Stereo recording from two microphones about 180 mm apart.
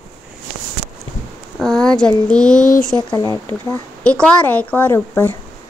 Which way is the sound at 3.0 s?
20° left (ahead or behind).